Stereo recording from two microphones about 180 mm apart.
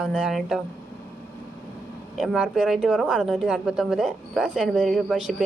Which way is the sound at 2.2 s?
Centre (ahead or behind).